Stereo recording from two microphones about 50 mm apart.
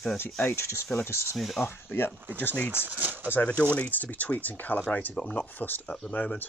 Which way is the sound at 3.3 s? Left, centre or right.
Left.